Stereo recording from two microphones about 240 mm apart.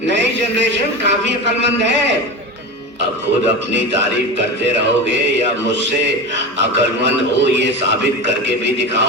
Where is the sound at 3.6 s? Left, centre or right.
Right.